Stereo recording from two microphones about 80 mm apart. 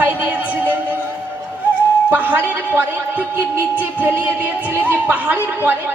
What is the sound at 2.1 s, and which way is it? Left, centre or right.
Speech, right.